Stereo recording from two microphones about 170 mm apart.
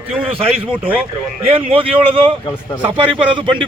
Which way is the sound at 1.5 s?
30° right (ahead or behind).